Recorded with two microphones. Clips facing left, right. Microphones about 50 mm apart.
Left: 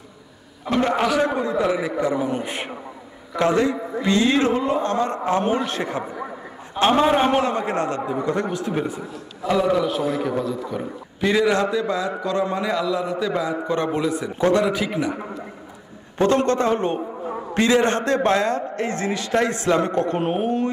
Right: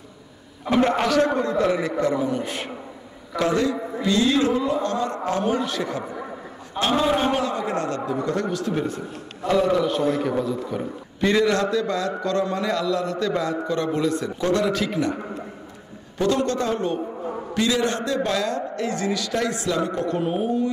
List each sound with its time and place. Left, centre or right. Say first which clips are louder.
0.7 s a man's voice: even; centre; by 6.0 s left
6.0 s a sound: left 1 dB; centre
6.8 s a man's voice: left 4 dB; left
8.0 s a man's voice: left 1 dB; centre
9.5 s a man's voice: even; centre
16.2 s a man's voice: left 3 dB; left